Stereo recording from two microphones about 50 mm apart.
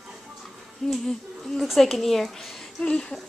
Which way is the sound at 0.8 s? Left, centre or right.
Centre.